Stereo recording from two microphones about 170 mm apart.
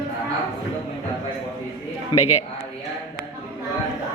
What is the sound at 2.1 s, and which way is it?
Speech, 25° left (ahead or behind).